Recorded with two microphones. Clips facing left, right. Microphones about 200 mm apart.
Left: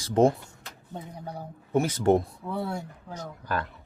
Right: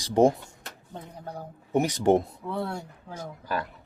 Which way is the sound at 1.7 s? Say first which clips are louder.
Right 1 dB; 15° right (ahead or behind).